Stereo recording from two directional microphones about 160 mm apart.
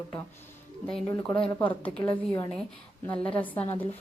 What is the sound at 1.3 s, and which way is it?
A woman's voice, 5° left (ahead or behind).